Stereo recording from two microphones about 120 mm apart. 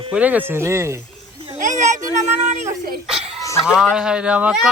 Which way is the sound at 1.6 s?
90° right.